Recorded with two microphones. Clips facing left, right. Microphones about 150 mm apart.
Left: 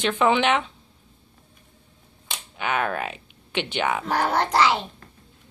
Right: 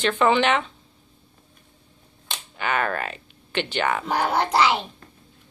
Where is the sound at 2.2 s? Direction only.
5° left (ahead or behind).